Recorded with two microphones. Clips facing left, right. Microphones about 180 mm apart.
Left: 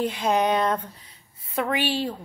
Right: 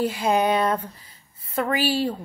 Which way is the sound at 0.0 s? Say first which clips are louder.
Right 1 dB; 5° right (ahead or behind).